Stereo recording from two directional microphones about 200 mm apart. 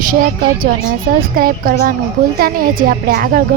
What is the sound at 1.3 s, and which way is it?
A woman's voice, 45° right (ahead or behind).